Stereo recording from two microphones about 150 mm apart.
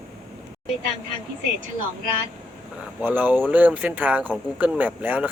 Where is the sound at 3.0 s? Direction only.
10° right (ahead or behind).